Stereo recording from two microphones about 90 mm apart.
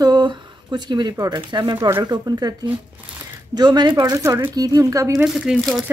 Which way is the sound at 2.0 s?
50° right (ahead or behind).